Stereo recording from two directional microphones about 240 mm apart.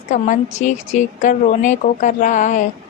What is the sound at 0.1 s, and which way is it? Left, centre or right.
A woman's voice, left.